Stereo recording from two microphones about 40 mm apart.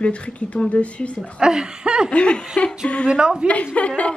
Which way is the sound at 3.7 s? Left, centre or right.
Left.